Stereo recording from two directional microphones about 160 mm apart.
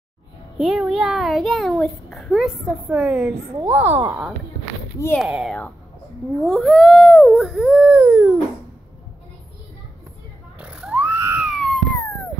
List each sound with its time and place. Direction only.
0.6 s a child's voice: 5° right (ahead or behind)
4.9 s speech: 15° left (ahead or behind)
5.2 s a child's voice: centre (ahead or behind)
7.9 s dog: 15° right (ahead or behind)
10.6 s a sound: 5° right (ahead or behind)
11.5 s a sound: 5° left (ahead or behind)